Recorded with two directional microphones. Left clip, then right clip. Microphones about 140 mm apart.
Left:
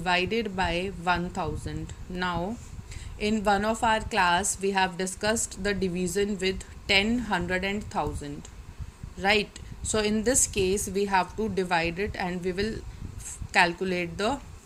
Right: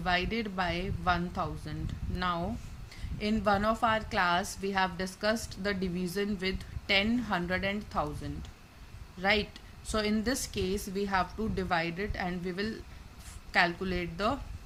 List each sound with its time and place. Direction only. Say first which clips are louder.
0.0 s a woman's voice: left 5 dB; 20° left (ahead or behind)